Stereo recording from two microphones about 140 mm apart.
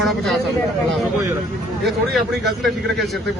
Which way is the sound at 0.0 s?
Centre (ahead or behind).